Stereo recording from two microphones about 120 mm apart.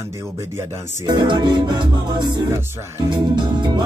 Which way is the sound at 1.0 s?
40° right (ahead or behind).